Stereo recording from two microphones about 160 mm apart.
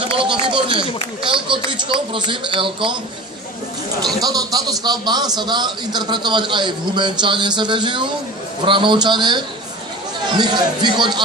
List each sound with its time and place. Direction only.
0.0 s speech: 35° right (ahead or behind)
4.2 s a man's voice: 25° right (ahead or behind)